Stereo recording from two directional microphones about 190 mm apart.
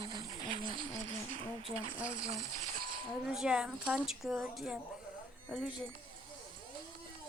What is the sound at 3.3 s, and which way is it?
A woman's voice, 5° right (ahead or behind).